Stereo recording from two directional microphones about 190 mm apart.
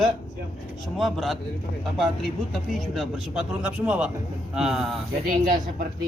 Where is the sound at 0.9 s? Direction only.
Centre (ahead or behind).